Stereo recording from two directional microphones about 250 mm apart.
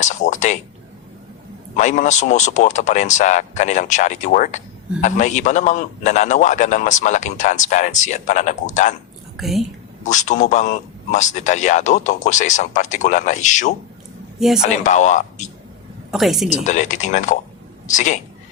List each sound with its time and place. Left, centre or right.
0.0 s a sound: left
1.7 s speech: left
9.4 s a woman's voice: centre
10.0 s speech: left
14.3 s speech: centre
14.7 s speech: left
16.1 s a woman's voice: centre
16.5 s speech: left